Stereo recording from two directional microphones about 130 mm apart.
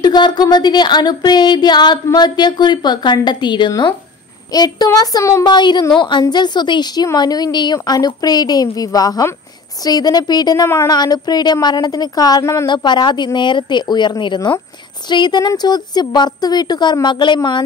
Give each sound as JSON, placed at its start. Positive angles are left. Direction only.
{"t": 0.0, "sound": "a woman's voice", "side_deg": 35}